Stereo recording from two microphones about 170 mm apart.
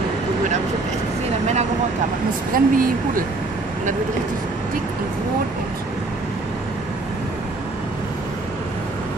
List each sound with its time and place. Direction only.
2.5 s speech: 55° right (ahead or behind)